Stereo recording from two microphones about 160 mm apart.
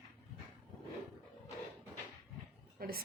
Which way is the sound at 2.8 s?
70° right (ahead or behind).